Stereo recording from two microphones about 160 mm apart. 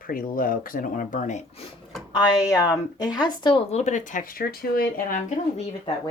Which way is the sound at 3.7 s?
50° left (ahead or behind).